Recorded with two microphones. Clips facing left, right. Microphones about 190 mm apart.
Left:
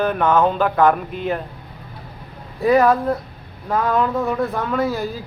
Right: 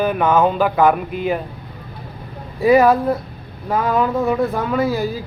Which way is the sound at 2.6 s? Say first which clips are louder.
Right 2 dB; 5° right (ahead or behind).